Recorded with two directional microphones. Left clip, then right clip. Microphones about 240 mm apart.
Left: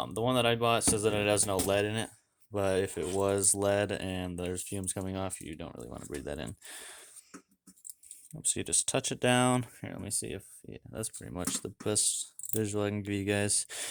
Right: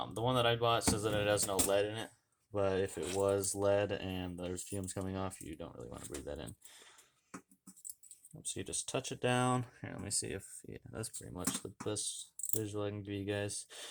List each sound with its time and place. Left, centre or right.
0.0 s speech: left
8.3 s speech: left
11.2 s speech: left